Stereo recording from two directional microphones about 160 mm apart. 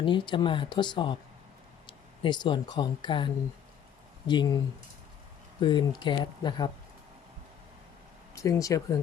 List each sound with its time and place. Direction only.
0.0 s speech: 30° left (ahead or behind)
8.4 s speech: 20° left (ahead or behind)